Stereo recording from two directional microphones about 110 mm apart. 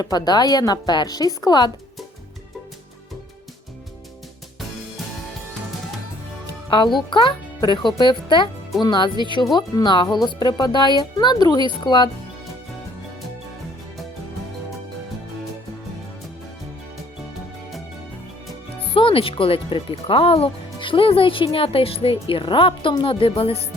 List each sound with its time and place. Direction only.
0.0 s speech: 35° left (ahead or behind)
6.7 s a child's voice: 45° left (ahead or behind)
18.8 s speech: 55° left (ahead or behind)